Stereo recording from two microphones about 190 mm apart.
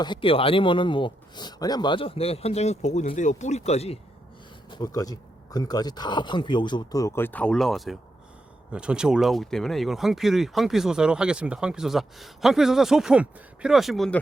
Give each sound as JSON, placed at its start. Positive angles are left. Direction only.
{"t": 0.0, "sound": "speech", "side_deg": 25}
{"t": 4.7, "sound": "speech", "side_deg": 20}